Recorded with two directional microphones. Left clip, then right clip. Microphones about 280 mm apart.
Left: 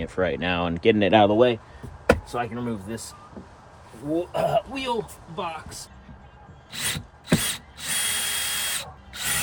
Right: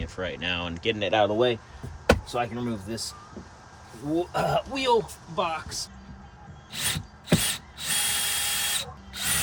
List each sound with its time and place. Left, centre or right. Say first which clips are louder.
0.0 s speech: left 6 dB; centre
2.0 s speech: left 1 dB; centre
4.1 s speech: left 2 dB; centre
6.7 s drill: left 1 dB; centre